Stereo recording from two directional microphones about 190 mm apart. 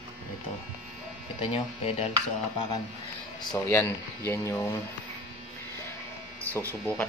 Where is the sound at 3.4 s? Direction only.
20° left (ahead or behind).